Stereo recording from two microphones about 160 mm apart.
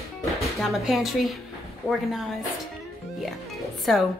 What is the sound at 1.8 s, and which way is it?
Speech, 20° left (ahead or behind).